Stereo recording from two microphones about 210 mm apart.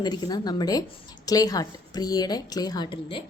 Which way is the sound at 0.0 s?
20° left (ahead or behind).